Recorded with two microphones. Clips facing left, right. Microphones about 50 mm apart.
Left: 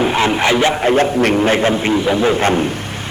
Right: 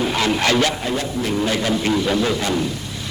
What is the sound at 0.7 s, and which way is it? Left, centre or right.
Speech, left.